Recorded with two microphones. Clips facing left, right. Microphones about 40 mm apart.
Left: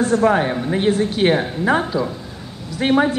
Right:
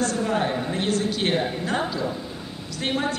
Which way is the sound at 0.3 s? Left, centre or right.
Left.